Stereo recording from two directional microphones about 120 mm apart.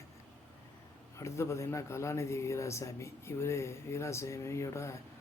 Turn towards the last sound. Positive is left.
turn(degrees=25)  # may be behind; listen again after turning